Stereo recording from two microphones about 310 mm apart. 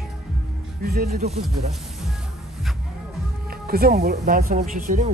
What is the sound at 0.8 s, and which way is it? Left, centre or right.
Speech, right.